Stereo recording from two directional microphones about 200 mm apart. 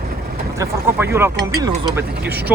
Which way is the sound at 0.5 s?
15° right (ahead or behind).